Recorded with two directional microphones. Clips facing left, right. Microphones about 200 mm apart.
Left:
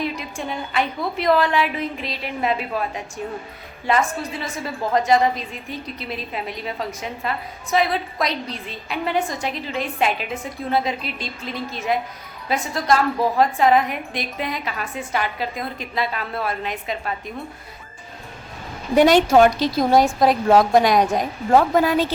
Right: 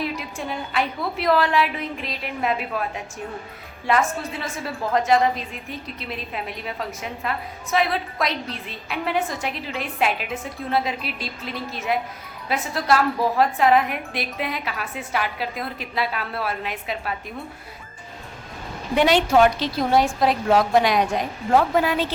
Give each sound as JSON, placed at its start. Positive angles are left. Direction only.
{"t": 0.0, "sound": "a woman's voice", "side_deg": -5}
{"t": 3.8, "sound": "a woman's voice", "side_deg": 0}
{"t": 18.9, "sound": "a woman's voice", "side_deg": 45}